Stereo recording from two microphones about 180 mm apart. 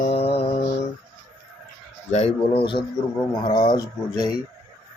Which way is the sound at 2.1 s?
35° left (ahead or behind).